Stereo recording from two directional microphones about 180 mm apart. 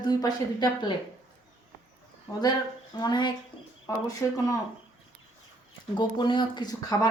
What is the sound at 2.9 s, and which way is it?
Speech, 25° left (ahead or behind).